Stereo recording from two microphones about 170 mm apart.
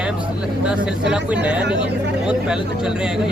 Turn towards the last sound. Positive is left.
turn(degrees=-5)  # may be behind; listen again after turning